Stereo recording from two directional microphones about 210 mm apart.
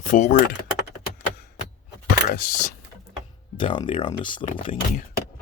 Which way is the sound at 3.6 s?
25° left (ahead or behind).